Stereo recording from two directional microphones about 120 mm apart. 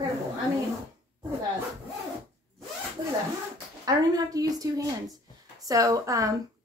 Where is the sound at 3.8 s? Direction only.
30° right (ahead or behind).